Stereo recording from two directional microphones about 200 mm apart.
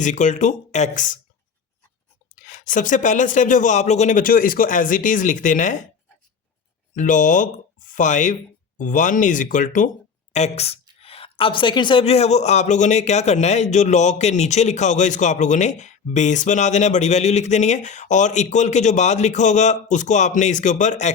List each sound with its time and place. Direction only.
0.0 s a woman's voice: 40° left (ahead or behind)
2.3 s a woman's voice: 40° left (ahead or behind)
6.9 s a woman's voice: 40° left (ahead or behind)